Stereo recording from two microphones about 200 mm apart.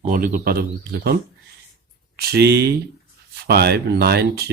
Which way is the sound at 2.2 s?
50° right (ahead or behind).